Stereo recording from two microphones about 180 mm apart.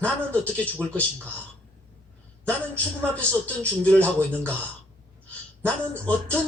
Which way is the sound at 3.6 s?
5° left (ahead or behind).